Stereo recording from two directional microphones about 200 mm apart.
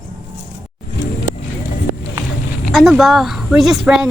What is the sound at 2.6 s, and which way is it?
Speech, centre (ahead or behind).